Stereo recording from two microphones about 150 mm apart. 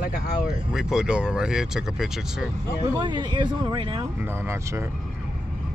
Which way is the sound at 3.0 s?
30° right (ahead or behind).